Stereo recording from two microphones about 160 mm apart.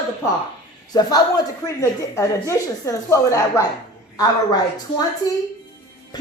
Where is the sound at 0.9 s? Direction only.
25° left (ahead or behind).